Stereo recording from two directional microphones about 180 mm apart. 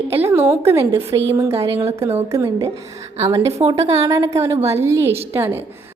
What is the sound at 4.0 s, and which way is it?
A woman's voice, 20° right (ahead or behind).